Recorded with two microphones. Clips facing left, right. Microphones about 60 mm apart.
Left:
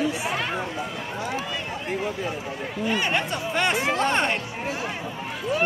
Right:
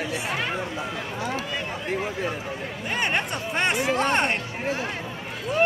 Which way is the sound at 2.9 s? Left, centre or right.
Right.